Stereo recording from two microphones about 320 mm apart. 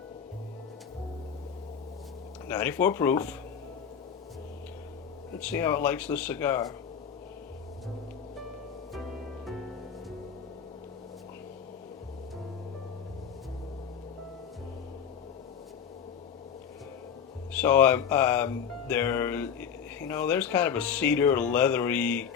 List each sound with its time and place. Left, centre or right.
2.5 s speech: centre
5.4 s speech: centre
17.5 s speech: centre